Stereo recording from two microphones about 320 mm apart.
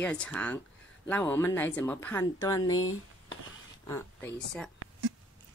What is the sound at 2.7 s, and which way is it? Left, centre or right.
Speech, left.